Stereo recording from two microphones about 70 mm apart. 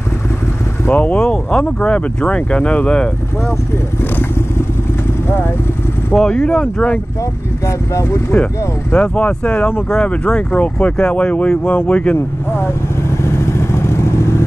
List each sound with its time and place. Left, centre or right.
0.8 s speech: left
1.2 s speech: centre
6.1 s speech: centre
7.6 s speech: left
8.9 s speech: centre
13.2 s vehicle: left